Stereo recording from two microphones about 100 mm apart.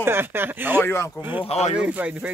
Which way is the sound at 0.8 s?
25° left (ahead or behind).